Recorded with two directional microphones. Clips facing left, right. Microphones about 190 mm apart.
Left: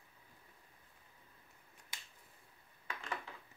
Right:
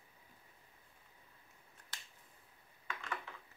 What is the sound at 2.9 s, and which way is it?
Dishes, 35° left (ahead or behind).